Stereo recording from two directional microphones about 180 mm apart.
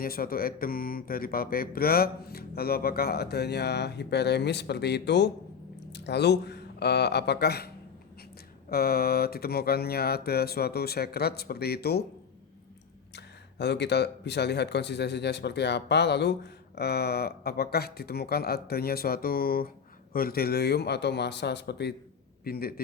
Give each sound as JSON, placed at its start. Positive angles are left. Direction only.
{"t": 0.0, "sound": "speech", "side_deg": 55}
{"t": 8.7, "sound": "speech", "side_deg": 60}
{"t": 13.1, "sound": "a man's voice", "side_deg": 70}
{"t": 22.4, "sound": "speech", "side_deg": 55}